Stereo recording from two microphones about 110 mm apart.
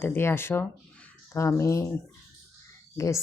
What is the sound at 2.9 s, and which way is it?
Speech, 30° left (ahead or behind).